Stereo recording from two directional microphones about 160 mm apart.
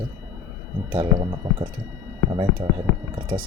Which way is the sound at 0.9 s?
30° right (ahead or behind).